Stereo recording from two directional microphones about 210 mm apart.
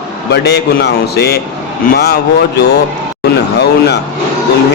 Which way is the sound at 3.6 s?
55° left (ahead or behind).